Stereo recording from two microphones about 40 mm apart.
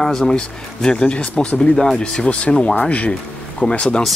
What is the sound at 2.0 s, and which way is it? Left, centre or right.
Speech, left.